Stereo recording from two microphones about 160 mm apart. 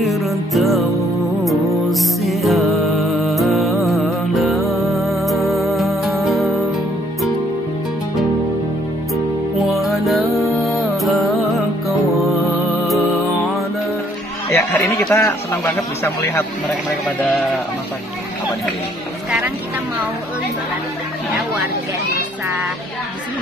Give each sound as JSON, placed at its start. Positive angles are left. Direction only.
{"t": 0.0, "sound": "music", "side_deg": 0}
{"t": 9.8, "sound": "music", "side_deg": 0}
{"t": 14.5, "sound": "speech", "side_deg": 15}